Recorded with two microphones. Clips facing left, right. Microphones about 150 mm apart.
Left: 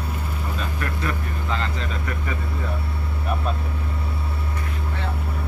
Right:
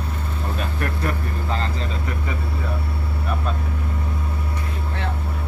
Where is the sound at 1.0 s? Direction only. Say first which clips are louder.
Right 2 dB; 35° right (ahead or behind).